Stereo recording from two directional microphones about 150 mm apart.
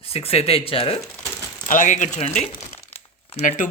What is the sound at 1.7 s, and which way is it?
Speech, 55° left (ahead or behind).